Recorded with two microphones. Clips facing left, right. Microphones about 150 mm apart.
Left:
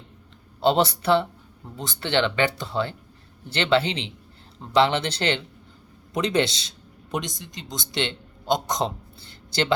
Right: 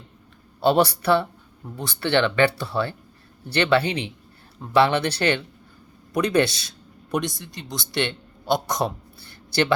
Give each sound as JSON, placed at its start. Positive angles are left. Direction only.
{"t": 0.6, "sound": "speech", "side_deg": 20}
{"t": 6.1, "sound": "a man's voice", "side_deg": 20}